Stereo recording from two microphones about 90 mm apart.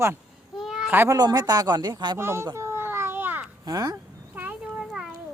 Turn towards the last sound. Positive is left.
turn(degrees=-5)  # may be behind; listen again after turning